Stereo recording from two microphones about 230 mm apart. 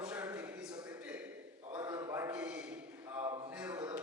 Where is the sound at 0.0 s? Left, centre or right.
Centre.